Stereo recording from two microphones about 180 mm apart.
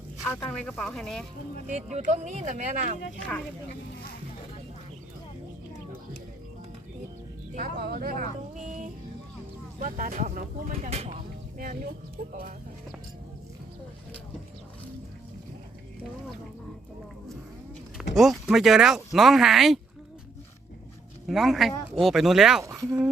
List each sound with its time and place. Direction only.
0.3 s speech: 10° left (ahead or behind)
1.6 s speech: 40° right (ahead or behind)
7.5 s speech: 55° right (ahead or behind)
10.8 s speech: 35° right (ahead or behind)
11.5 s speech: 50° right (ahead or behind)
18.1 s speech: centre (ahead or behind)
21.2 s speech: centre (ahead or behind)
22.6 s speech: 20° right (ahead or behind)